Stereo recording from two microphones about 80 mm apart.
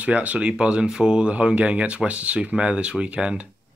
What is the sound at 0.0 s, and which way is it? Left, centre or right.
Speech, centre.